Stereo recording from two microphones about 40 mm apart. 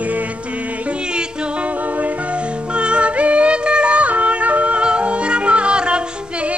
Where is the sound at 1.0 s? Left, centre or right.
Right.